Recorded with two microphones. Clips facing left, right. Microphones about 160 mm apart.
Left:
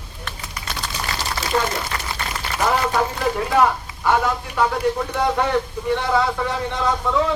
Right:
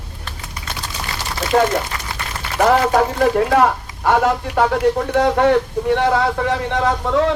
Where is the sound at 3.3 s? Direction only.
75° right (ahead or behind).